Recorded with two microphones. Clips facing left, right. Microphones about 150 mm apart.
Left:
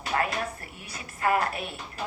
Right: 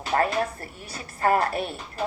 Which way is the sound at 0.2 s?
40° right (ahead or behind).